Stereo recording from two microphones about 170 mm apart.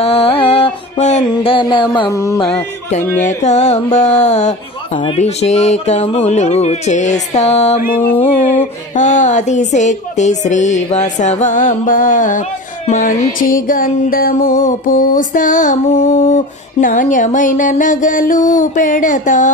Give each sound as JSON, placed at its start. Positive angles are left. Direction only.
{"t": 0.0, "sound": "music", "side_deg": 35}
{"t": 1.3, "sound": "mantra", "side_deg": 30}
{"t": 2.4, "sound": "a sound", "side_deg": 40}
{"t": 3.2, "sound": "speech", "side_deg": 45}
{"t": 7.8, "sound": "music", "side_deg": 60}
{"t": 8.2, "sound": "a sound", "side_deg": 45}